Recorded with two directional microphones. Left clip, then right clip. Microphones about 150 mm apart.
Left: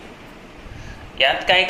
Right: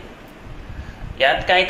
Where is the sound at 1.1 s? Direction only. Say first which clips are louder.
Even; 90° right.